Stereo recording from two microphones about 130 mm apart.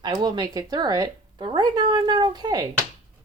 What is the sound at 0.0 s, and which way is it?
Speech, 35° right (ahead or behind).